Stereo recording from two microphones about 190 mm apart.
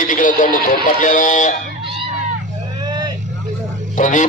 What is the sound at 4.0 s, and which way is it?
Speech, 40° left (ahead or behind).